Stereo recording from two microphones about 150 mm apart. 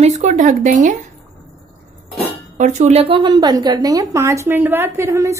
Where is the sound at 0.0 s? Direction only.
50° right (ahead or behind).